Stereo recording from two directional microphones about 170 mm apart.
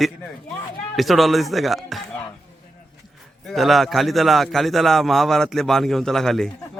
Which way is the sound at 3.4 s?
Centre (ahead or behind).